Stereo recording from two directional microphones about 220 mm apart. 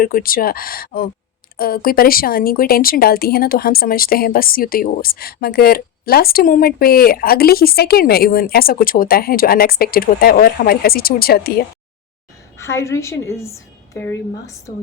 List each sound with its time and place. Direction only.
0.0 s speech: 40° left (ahead or behind)
12.5 s a woman's voice: 15° left (ahead or behind)